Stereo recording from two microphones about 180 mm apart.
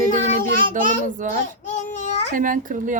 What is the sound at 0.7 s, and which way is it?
Speech, 45° right (ahead or behind).